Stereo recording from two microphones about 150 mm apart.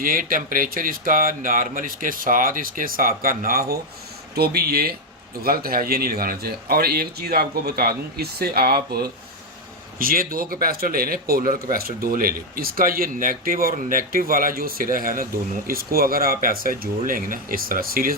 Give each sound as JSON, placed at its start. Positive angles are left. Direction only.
{"t": 0.0, "sound": "a man's voice", "side_deg": -70}
{"t": 10.0, "sound": "a man's voice", "side_deg": -75}